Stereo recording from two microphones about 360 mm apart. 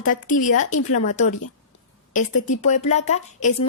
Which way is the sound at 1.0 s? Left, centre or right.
Centre.